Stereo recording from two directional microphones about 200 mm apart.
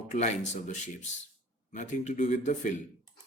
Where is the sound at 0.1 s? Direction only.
35° left (ahead or behind).